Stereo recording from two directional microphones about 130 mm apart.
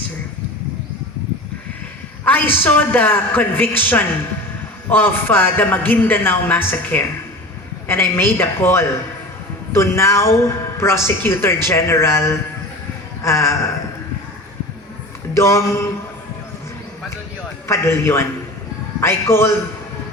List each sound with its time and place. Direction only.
2.2 s a man's voice: 15° left (ahead or behind)
15.4 s a woman's voice: 20° left (ahead or behind)
17.7 s a woman's voice: 20° left (ahead or behind)